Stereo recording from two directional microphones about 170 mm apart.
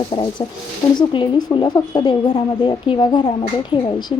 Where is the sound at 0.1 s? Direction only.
30° left (ahead or behind).